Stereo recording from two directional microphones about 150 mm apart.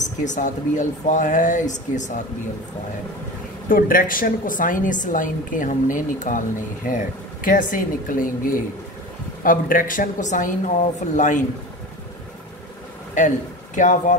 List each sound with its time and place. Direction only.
0.0 s a woman's voice: 55° left (ahead or behind)
3.6 s a woman's voice: 65° left (ahead or behind)
7.4 s a woman's voice: 65° left (ahead or behind)
9.4 s a woman's voice: 65° left (ahead or behind)
13.2 s a woman's voice: 55° left (ahead or behind)